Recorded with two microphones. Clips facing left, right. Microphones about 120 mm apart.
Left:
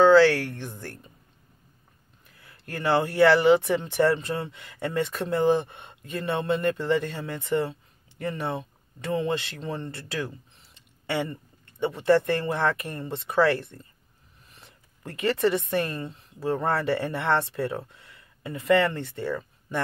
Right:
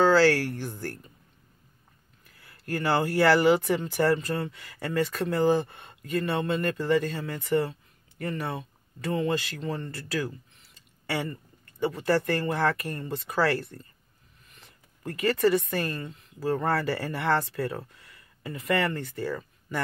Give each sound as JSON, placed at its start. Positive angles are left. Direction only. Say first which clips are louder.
{"t": 0.7, "sound": "speech", "louder": "right 3 dB", "side_deg": 20}
{"t": 2.2, "sound": "a woman's voice", "louder": "right 6 dB", "side_deg": 20}